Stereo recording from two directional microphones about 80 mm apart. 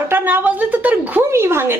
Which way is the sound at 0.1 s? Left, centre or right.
Right.